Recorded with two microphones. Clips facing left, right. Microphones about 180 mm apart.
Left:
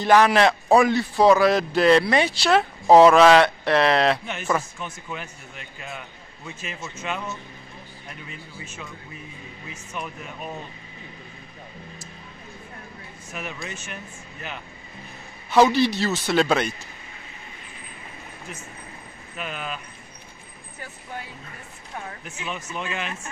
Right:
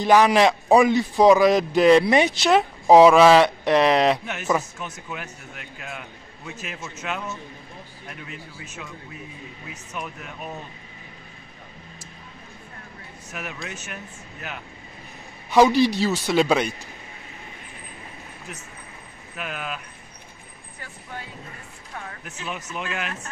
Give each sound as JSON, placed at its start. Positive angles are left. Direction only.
{"t": 0.0, "sound": "a man's voice", "side_deg": -10}
{"t": 2.9, "sound": "a man's voice", "side_deg": -5}
{"t": 9.7, "sound": "a man's voice", "side_deg": 0}
{"t": 13.3, "sound": "a man's voice", "side_deg": 0}
{"t": 15.5, "sound": "a man's voice", "side_deg": -10}
{"t": 19.3, "sound": "a man's voice", "side_deg": -5}
{"t": 22.5, "sound": "a man's voice", "side_deg": -5}